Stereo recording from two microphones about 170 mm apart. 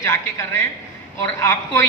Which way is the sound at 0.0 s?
15° left (ahead or behind).